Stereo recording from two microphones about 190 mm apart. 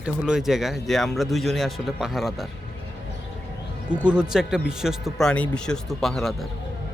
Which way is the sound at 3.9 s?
5° right (ahead or behind).